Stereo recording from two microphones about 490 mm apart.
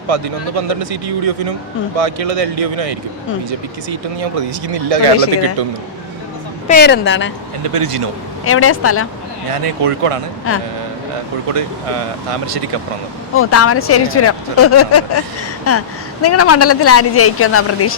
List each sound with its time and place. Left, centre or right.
0.1 s a man's voice: right
3.8 s a man's voice: right
6.7 s speech: centre
7.6 s a man's voice: right
8.4 s speech: left
9.5 s a man's voice: right
10.5 s speech: left
11.5 s a man's voice: right
13.3 s speech: left